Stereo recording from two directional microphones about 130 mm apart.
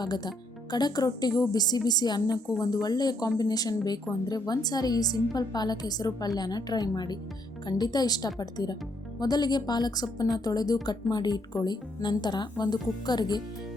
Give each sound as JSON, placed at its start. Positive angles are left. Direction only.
{"t": 0.0, "sound": "a woman's voice", "side_deg": 30}